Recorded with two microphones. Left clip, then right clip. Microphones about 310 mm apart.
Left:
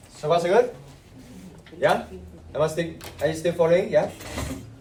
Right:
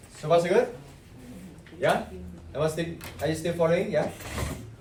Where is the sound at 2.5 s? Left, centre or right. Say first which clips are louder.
Left 4 dB; left.